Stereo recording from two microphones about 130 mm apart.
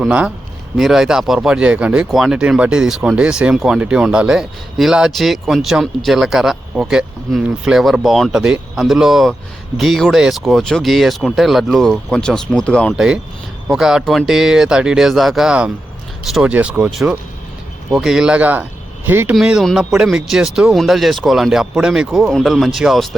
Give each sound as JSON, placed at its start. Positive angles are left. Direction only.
{"t": 0.0, "sound": "speech", "side_deg": -10}
{"t": 19.3, "sound": "speech", "side_deg": -5}